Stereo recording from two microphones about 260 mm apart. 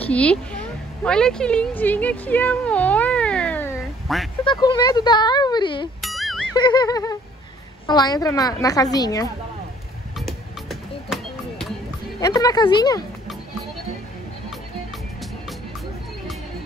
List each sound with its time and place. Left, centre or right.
0.0 s a woman's voice: centre
4.5 s a woman's voice: centre
5.9 s music: centre
6.5 s a woman's voice: centre
10.1 s a sound: centre
12.2 s a woman's voice: centre